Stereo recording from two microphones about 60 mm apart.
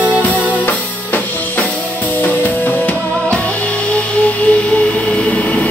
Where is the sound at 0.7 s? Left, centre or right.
Left.